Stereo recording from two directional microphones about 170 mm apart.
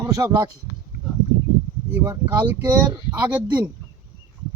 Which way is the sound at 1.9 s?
10° right (ahead or behind).